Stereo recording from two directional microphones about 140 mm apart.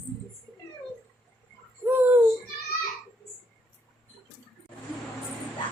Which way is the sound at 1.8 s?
15° right (ahead or behind).